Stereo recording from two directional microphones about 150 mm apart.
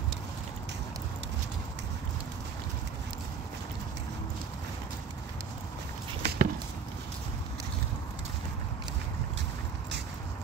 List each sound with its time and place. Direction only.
6.2 s chop: 75° right (ahead or behind)